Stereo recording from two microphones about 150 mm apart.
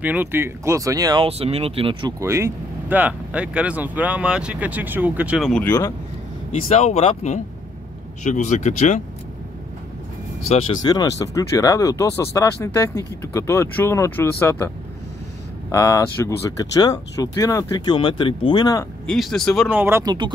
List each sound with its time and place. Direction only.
0.0 s speech: 10° right (ahead or behind)
1.2 s speech: 40° right (ahead or behind)
2.1 s speech: 20° right (ahead or behind)
5.5 s speech: 10° left (ahead or behind)
6.7 s speech: 45° left (ahead or behind)
10.8 s speech: 25° left (ahead or behind)
15.7 s speech: 20° left (ahead or behind)
19.0 s speech: centre (ahead or behind)
19.7 s speech: 15° right (ahead or behind)